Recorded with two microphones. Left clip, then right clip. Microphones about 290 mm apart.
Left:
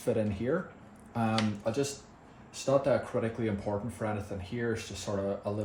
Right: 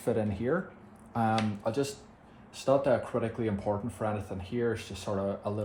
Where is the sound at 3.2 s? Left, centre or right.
Centre.